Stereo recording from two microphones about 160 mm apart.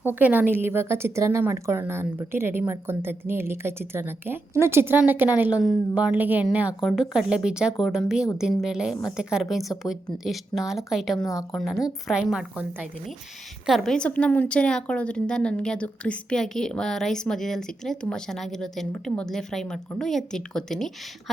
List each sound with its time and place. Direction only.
0.0 s a woman's voice: 10° right (ahead or behind)
11.2 s a woman's voice: 20° left (ahead or behind)
11.8 s a woman's voice: centre (ahead or behind)